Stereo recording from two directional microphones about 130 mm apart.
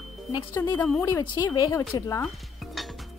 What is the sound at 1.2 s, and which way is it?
Speech, 35° left (ahead or behind).